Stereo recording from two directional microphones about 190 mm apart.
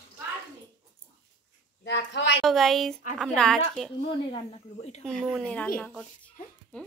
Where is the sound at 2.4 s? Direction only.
Centre (ahead or behind).